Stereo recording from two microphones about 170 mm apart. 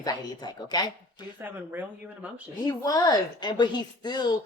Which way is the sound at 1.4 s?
10° right (ahead or behind).